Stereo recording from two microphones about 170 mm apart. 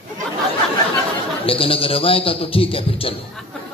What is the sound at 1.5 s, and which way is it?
A man's voice, 35° left (ahead or behind).